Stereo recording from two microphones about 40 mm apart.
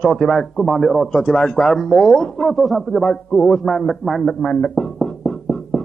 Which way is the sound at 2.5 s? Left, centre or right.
Centre.